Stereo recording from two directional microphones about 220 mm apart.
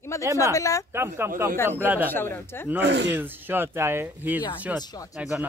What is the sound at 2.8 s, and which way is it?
Speech, 50° right (ahead or behind).